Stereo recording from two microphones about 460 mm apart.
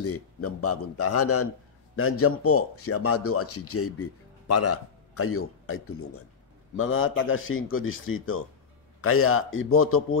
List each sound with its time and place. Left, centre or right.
0.0 s speech: left